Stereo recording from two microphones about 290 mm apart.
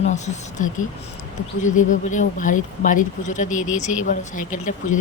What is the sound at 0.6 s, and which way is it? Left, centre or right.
Speech, left.